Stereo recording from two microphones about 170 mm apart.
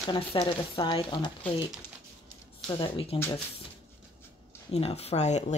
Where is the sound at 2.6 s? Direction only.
30° left (ahead or behind).